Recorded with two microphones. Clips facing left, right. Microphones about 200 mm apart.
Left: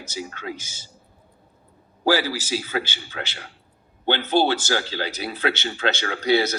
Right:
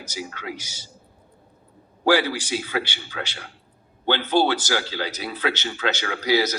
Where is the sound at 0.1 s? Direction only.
25° left (ahead or behind).